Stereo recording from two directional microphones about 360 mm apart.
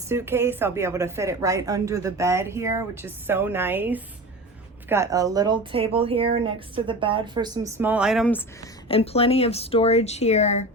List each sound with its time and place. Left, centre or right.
0.1 s a woman's voice: centre